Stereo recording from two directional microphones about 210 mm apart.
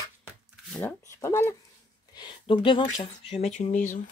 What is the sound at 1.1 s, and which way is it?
Speech, 15° left (ahead or behind).